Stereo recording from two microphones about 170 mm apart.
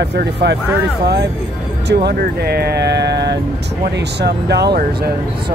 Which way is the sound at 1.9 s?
70° right (ahead or behind).